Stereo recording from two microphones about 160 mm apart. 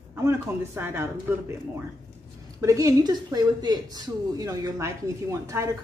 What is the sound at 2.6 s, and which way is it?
A woman's voice, 20° right (ahead or behind).